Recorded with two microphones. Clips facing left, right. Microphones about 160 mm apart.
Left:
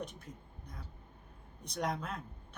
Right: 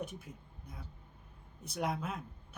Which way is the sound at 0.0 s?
5° right (ahead or behind).